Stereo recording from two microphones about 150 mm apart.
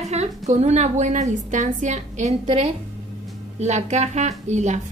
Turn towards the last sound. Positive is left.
turn(degrees=-50)  # may be behind; listen again after turning